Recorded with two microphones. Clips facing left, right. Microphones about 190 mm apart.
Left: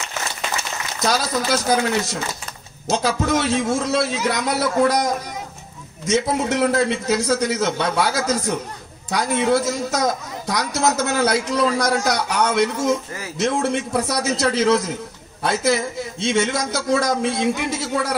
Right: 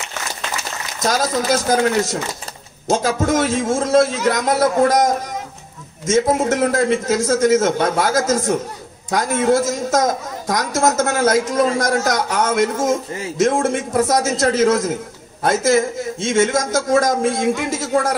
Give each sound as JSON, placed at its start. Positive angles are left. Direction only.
{"t": 0.9, "sound": "a woman's voice", "side_deg": -50}
{"t": 2.9, "sound": "a woman's voice", "side_deg": -45}